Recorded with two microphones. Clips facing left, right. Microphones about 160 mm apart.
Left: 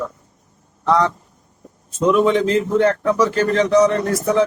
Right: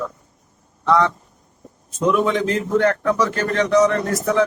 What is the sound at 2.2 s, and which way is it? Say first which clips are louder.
Speech: left 4 dB; 30° left (ahead or behind).